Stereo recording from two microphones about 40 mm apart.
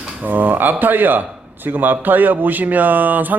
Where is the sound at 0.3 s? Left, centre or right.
Right.